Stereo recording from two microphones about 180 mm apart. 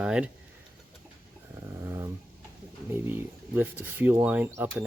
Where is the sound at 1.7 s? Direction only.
15° right (ahead or behind).